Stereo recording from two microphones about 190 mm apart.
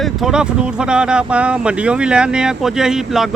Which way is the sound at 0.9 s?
5° right (ahead or behind).